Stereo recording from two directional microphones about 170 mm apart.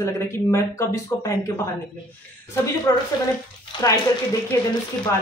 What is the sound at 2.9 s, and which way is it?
A woman's voice, 20° left (ahead or behind).